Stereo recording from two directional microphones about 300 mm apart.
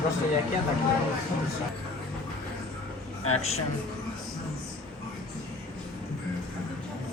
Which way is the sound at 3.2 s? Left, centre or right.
Left.